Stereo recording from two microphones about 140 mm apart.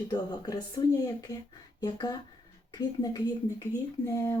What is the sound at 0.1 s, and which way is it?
Speech, 30° left (ahead or behind).